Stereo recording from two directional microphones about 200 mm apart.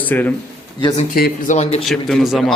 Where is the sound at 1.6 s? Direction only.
30° left (ahead or behind).